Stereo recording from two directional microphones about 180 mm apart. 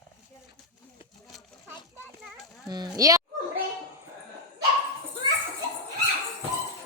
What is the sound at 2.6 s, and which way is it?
Speech, 20° right (ahead or behind).